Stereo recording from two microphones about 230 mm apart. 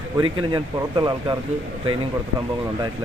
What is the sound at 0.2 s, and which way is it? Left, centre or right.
Speech, centre.